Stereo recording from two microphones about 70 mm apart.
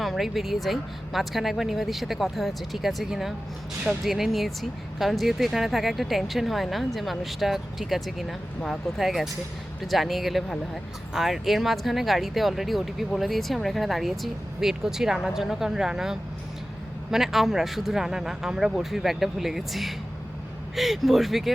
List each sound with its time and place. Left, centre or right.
0.0 s speech: centre